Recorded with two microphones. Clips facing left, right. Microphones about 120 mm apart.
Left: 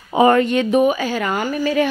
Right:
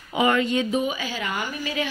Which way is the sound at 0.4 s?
65° left (ahead or behind).